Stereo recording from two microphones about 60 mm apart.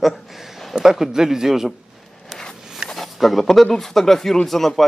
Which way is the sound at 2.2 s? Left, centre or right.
Centre.